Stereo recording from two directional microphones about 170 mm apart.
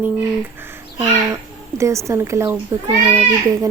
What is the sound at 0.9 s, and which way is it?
Bird, 20° right (ahead or behind).